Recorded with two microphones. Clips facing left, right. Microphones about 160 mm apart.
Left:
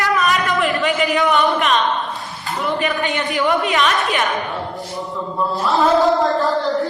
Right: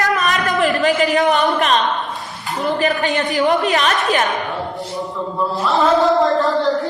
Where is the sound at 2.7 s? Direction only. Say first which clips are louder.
Right 3 dB; 35° right (ahead or behind).